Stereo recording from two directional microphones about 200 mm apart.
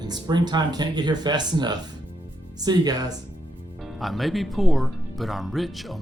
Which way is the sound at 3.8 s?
Centre (ahead or behind).